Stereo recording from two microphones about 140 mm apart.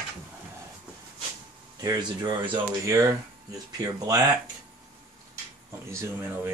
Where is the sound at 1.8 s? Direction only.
25° right (ahead or behind).